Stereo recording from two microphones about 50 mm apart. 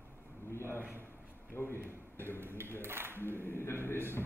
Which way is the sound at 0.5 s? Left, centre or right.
Left.